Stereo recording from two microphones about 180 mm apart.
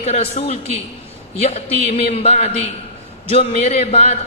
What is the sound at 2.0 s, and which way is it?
Speech, 35° left (ahead or behind).